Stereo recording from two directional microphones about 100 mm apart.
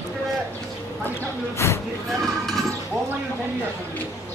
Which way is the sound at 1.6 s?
25° left (ahead or behind).